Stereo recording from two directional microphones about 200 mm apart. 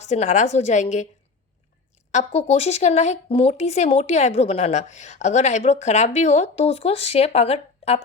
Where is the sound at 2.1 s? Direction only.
35° left (ahead or behind).